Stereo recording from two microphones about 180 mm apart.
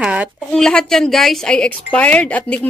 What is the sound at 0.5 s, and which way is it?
Speech, 5° left (ahead or behind).